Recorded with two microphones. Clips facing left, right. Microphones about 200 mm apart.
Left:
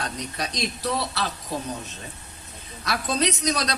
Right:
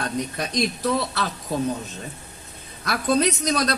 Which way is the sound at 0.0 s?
50° right (ahead or behind).